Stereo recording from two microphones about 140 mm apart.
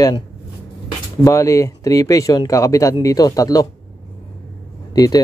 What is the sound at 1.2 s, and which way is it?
Speech, 20° left (ahead or behind).